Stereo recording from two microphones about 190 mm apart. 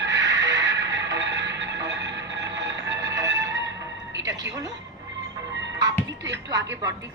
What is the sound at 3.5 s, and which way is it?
Music, 70° right (ahead or behind).